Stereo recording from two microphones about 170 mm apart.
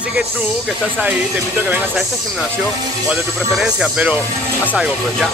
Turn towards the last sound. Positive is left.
turn(degrees=-5)  # may be behind; listen again after turning